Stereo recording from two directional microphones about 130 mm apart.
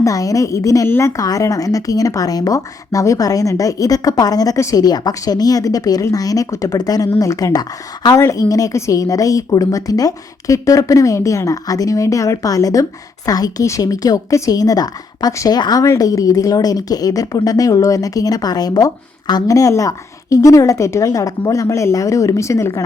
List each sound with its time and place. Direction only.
0.0 s a woman's voice: 25° left (ahead or behind)